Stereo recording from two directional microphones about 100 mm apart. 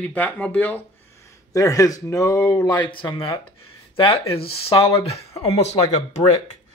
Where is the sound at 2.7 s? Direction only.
55° left (ahead or behind); by 5.2 s 75° left (ahead or behind).